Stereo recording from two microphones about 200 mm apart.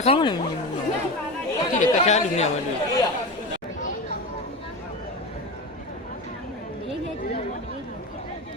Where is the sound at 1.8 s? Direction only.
35° left (ahead or behind).